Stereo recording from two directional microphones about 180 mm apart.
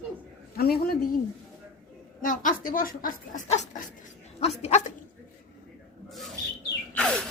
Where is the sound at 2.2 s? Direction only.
45° left (ahead or behind).